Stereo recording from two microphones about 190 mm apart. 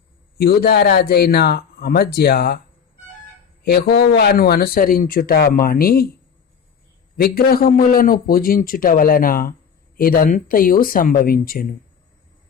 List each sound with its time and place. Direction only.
0.3 s speech: 55° left (ahead or behind)
3.6 s speech: 55° left (ahead or behind)
7.2 s speech: 55° left (ahead or behind)